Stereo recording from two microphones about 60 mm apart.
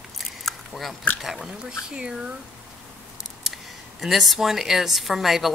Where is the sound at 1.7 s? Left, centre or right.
Centre.